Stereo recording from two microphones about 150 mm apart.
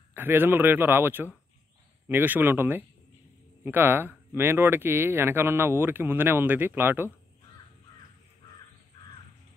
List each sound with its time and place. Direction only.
0.1 s speech: 15° right (ahead or behind)